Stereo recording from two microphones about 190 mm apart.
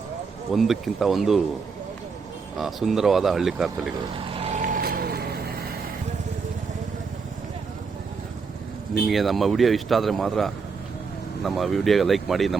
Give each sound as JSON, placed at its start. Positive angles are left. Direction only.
{"t": 0.5, "sound": "speech", "side_deg": 0}
{"t": 2.6, "sound": "speech", "side_deg": 0}
{"t": 4.3, "sound": "vehicle", "side_deg": -30}
{"t": 9.0, "sound": "speech", "side_deg": 0}